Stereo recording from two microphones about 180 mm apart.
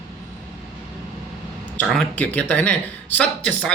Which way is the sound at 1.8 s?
10° left (ahead or behind).